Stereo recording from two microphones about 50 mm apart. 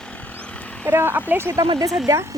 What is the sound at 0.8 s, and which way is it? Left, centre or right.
Speech, right.